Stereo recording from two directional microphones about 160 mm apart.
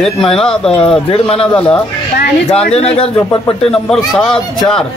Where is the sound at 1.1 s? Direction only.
35° left (ahead or behind).